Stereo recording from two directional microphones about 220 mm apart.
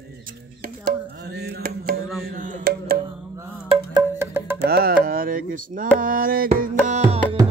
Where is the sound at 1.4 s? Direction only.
45° right (ahead or behind).